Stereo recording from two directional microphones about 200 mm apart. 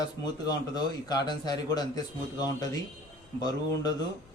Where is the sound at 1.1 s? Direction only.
20° left (ahead or behind).